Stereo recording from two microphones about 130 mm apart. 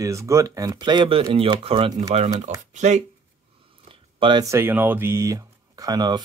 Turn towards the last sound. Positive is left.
turn(degrees=-30)  # may be behind; listen again after turning